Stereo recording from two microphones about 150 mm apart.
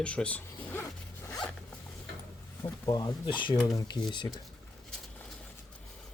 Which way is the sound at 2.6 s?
25° left (ahead or behind).